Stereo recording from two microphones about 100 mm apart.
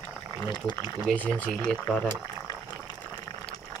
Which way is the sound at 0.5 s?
50° left (ahead or behind).